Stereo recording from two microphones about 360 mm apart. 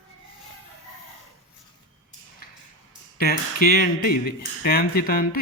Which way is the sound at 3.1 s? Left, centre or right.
Left.